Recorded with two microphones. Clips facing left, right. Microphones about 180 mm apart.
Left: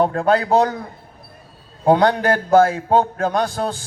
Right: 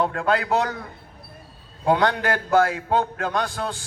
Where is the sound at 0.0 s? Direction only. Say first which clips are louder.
Left 5 dB; 35° left (ahead or behind).